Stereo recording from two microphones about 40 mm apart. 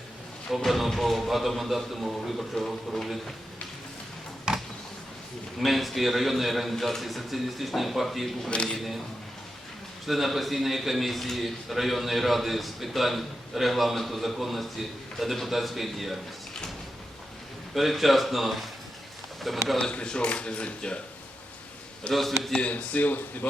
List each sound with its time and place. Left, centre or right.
0.5 s a man's voice: centre
4.5 s a sound: centre
5.5 s a man's voice: centre
8.4 s speech: left
10.1 s a man's voice: centre
17.7 s a man's voice: centre
19.8 s speech: left
22.1 s a man's voice: centre
22.7 s a man's voice: left